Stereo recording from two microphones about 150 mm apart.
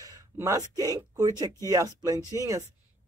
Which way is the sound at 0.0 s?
20° right (ahead or behind).